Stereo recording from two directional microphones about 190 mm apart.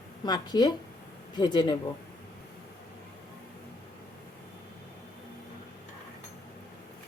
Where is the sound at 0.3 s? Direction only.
20° left (ahead or behind).